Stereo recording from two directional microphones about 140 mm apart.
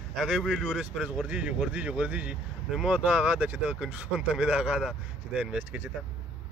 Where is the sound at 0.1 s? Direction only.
5° right (ahead or behind).